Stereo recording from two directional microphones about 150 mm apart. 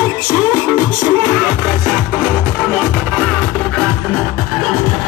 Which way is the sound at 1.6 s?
5° right (ahead or behind).